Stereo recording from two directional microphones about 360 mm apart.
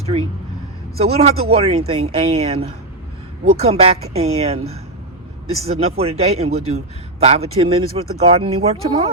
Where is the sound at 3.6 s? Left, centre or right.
Centre.